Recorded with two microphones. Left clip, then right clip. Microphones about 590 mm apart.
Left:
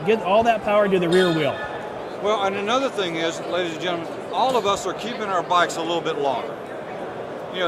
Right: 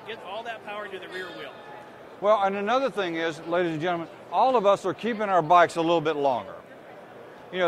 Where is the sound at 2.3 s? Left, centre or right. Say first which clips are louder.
Even; right.